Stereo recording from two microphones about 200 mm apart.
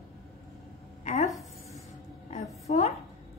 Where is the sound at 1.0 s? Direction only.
35° left (ahead or behind).